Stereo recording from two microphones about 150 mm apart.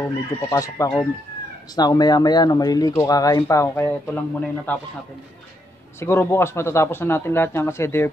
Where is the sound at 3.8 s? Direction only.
10° left (ahead or behind).